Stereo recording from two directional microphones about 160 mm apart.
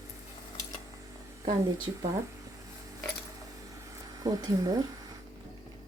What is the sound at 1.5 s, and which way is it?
Speech, 25° right (ahead or behind).